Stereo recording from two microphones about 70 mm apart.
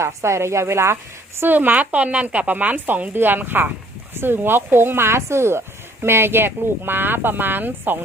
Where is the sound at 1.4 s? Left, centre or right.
Right.